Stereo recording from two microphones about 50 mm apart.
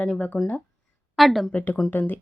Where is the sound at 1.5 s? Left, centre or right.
Left.